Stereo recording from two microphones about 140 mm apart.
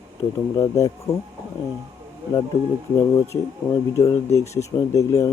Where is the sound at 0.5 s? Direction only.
25° left (ahead or behind).